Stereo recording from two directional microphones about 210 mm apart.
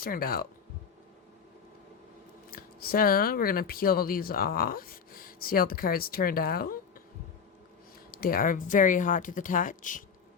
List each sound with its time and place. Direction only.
0.0 s speech: 45° left (ahead or behind)
2.5 s speech: 45° left (ahead or behind)
8.1 s speech: 45° left (ahead or behind)